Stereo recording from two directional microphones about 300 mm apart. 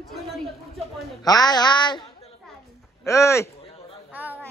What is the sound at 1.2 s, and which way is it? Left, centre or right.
Speech, centre.